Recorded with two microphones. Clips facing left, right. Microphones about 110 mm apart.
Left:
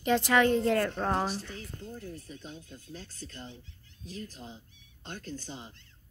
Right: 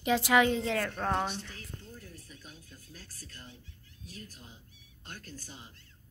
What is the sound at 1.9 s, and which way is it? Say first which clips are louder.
Speech: left 7 dB; 30° left (ahead or behind).